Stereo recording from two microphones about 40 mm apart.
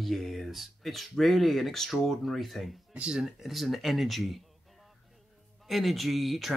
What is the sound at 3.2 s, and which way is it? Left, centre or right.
A man's voice, centre.